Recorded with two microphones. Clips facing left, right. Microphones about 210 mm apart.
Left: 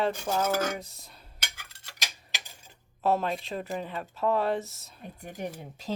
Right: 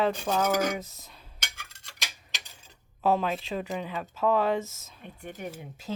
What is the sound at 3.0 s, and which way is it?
Cutlery, centre (ahead or behind).